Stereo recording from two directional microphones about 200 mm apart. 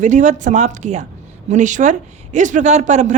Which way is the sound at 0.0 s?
35° right (ahead or behind).